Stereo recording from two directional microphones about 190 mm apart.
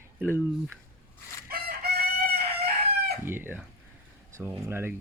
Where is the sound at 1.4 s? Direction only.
55° right (ahead or behind).